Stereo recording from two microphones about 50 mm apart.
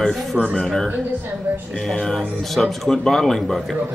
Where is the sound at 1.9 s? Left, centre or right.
Centre.